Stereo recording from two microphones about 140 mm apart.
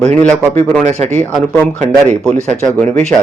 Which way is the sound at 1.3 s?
10° left (ahead or behind).